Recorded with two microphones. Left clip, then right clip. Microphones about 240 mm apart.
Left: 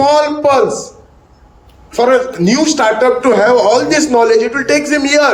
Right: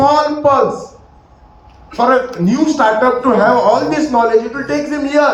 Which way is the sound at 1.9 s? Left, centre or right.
Left.